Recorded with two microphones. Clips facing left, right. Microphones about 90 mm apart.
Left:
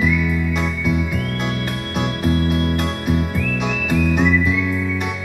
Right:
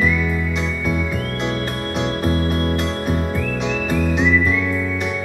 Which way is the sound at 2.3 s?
40° right (ahead or behind).